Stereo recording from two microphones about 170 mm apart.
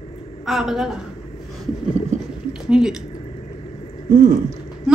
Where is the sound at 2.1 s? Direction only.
45° right (ahead or behind).